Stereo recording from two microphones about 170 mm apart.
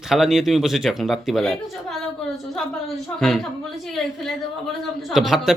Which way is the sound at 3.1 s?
Centre (ahead or behind).